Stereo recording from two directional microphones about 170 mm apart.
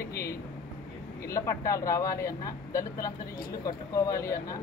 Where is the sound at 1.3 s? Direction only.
20° left (ahead or behind).